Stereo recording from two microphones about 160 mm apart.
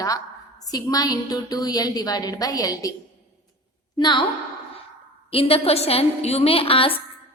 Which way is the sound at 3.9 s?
30° left (ahead or behind).